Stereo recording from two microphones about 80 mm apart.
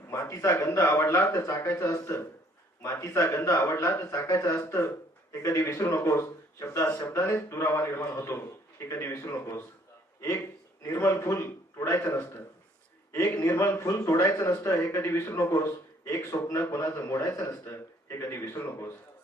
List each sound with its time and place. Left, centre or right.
0.1 s speech: left
10.9 s speech: left
13.2 s speech: left